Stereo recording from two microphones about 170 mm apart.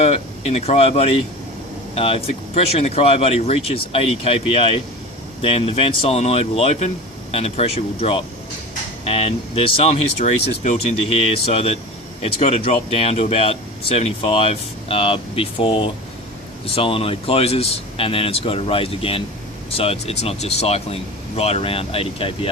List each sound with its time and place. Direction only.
0.0 s speech: 40° left (ahead or behind)